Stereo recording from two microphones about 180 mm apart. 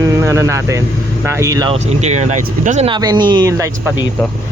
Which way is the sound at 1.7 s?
40° right (ahead or behind).